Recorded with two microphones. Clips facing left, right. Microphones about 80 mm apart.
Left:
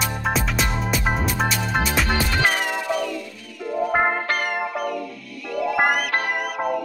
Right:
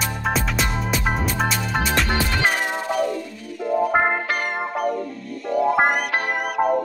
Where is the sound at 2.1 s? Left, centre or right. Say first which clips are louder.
Even; right.